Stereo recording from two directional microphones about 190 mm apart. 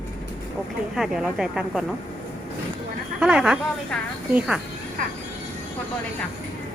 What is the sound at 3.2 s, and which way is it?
Speech, 5° right (ahead or behind).